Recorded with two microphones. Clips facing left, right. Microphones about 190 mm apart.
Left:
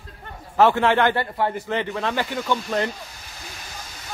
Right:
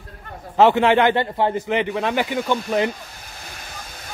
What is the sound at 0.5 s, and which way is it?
Speech, 20° right (ahead or behind).